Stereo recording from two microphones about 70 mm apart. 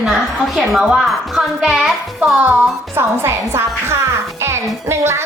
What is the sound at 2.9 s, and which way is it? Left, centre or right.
Music, right.